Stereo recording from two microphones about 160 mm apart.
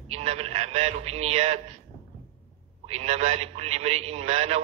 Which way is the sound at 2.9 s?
40° right (ahead or behind).